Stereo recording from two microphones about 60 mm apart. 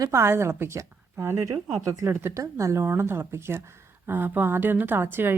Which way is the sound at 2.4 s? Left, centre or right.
Right.